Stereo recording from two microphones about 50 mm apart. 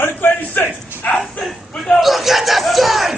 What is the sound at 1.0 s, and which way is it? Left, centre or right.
Speech, left.